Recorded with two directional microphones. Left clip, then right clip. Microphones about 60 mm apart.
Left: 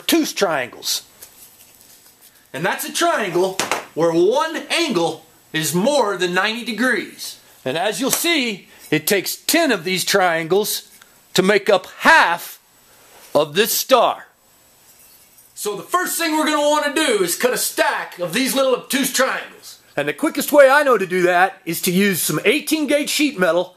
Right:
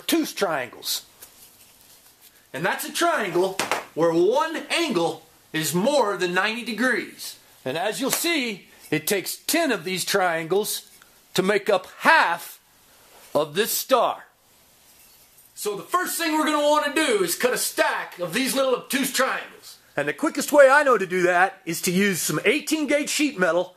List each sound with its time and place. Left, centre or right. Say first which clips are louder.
0.0 s speech: left 6 dB; left
2.5 s speech: left 4 dB; centre
3.9 s speech: left 4 dB; centre
7.6 s speech: left 5 dB; left
8.9 s speech: left 6 dB; left
15.5 s speech: left 4 dB; centre